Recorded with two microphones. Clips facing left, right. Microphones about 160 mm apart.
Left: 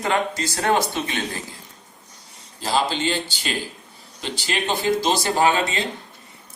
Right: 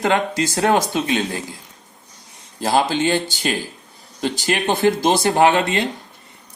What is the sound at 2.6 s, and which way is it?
Speech, 55° right (ahead or behind).